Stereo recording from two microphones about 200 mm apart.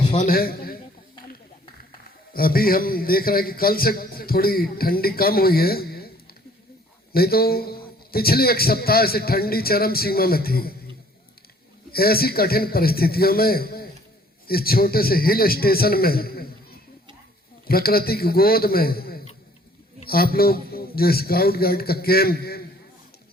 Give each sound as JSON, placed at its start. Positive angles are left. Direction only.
{"t": 0.0, "sound": "a sound", "side_deg": 25}
{"t": 0.3, "sound": "a man's voice", "side_deg": 50}
{"t": 2.3, "sound": "a man's voice", "side_deg": 45}
{"t": 7.1, "sound": "a man's voice", "side_deg": 50}
{"t": 11.9, "sound": "a man's voice", "side_deg": 50}
{"t": 17.7, "sound": "a man's voice", "side_deg": 50}